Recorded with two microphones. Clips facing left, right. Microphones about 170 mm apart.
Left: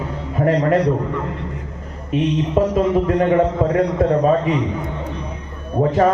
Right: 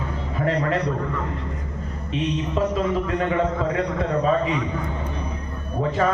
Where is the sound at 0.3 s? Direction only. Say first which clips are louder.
Left 7 dB; 45° left (ahead or behind).